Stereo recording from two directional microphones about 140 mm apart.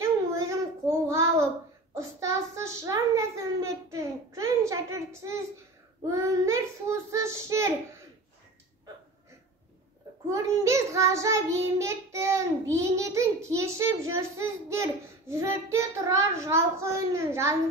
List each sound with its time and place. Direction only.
0.0 s child singing: 25° right (ahead or behind)
10.3 s child singing: 20° right (ahead or behind)